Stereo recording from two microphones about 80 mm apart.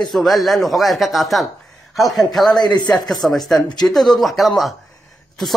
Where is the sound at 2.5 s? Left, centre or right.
Left.